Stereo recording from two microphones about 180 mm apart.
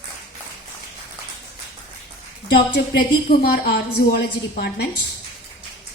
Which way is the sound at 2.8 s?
65° left (ahead or behind).